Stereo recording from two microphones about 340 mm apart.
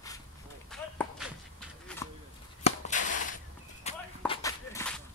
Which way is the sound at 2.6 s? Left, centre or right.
Left.